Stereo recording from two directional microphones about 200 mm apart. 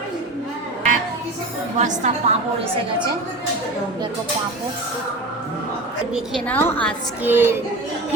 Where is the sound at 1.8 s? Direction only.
35° right (ahead or behind).